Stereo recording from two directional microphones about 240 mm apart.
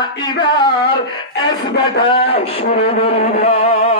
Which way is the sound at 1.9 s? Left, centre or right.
Left.